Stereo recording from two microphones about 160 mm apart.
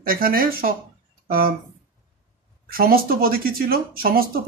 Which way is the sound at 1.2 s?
65° right (ahead or behind).